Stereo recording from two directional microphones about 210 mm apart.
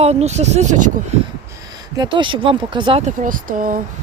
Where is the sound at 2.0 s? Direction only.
20° right (ahead or behind).